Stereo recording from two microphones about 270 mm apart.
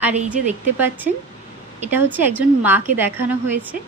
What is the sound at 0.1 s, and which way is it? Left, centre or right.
Speech, right.